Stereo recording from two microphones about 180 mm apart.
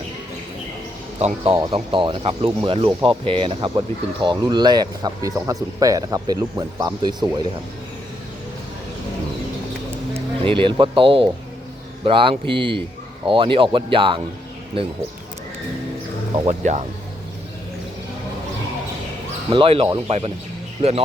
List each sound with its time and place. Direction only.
1.7 s speech: 30° right (ahead or behind)
10.2 s speech: 30° right (ahead or behind)
16.5 s speech: 40° right (ahead or behind)
19.5 s speech: 30° right (ahead or behind)